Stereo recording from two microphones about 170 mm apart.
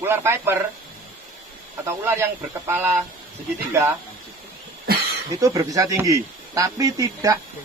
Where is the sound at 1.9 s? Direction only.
15° right (ahead or behind).